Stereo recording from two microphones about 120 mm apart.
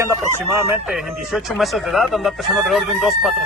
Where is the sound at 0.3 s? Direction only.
20° right (ahead or behind).